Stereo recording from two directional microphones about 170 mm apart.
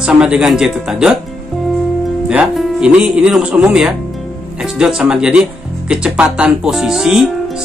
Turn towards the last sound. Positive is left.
turn(degrees=-5)  # may be behind; listen again after turning